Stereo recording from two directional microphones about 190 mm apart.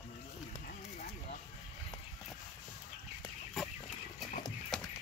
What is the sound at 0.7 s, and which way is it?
Horse, 45° left (ahead or behind).